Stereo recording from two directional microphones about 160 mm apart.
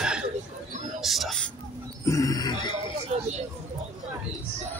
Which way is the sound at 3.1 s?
45° right (ahead or behind).